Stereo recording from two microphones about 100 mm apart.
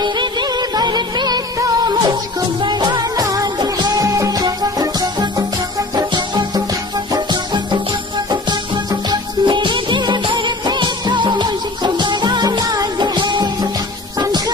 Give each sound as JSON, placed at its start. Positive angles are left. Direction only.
{"t": 0.0, "sound": "music", "side_deg": -45}
{"t": 9.1, "sound": "music", "side_deg": -50}